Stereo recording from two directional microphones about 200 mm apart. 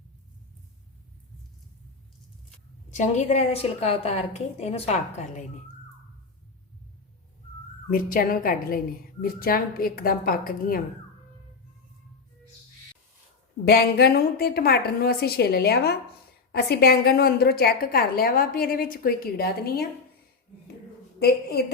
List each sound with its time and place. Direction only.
2.9 s a woman's voice: 35° left (ahead or behind)
7.9 s a woman's voice: 45° left (ahead or behind)
13.7 s a woman's voice: 50° left (ahead or behind)